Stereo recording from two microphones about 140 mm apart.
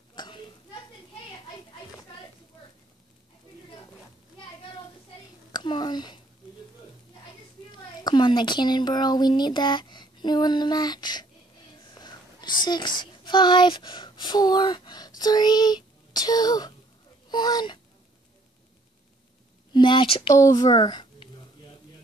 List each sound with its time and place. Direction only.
0.1 s a sound: 35° left (ahead or behind)
5.5 s a sound: 30° left (ahead or behind)
8.0 s speech: 35° left (ahead or behind)
11.9 s whispering: 30° left (ahead or behind)
12.6 s a woman's voice: 30° left (ahead or behind)
19.7 s speech: 35° left (ahead or behind)
20.3 s a woman's voice: 25° left (ahead or behind)